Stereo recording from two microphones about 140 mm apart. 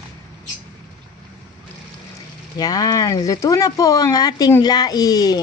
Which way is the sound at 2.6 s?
25° left (ahead or behind).